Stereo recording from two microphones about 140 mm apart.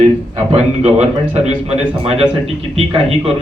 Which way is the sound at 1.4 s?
45° right (ahead or behind).